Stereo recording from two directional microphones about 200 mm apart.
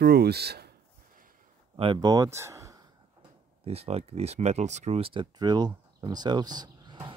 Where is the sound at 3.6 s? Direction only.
30° right (ahead or behind).